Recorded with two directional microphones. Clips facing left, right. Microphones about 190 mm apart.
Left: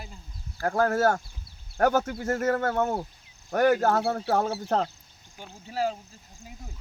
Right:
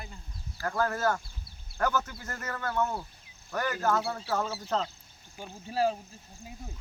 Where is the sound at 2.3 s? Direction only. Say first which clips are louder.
Left 13 dB; 70° left (ahead or behind).